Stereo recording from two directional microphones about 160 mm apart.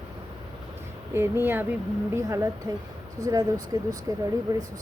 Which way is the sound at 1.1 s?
15° right (ahead or behind).